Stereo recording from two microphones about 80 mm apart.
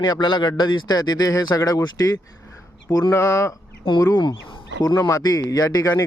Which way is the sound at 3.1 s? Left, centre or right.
Left.